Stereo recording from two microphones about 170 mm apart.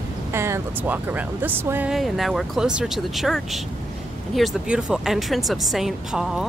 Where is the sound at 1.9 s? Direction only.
Centre (ahead or behind).